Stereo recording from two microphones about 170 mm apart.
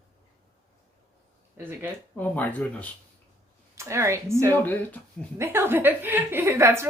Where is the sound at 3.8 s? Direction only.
15° right (ahead or behind).